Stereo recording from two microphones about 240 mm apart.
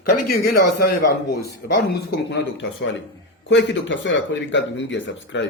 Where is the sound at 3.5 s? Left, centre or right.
Left.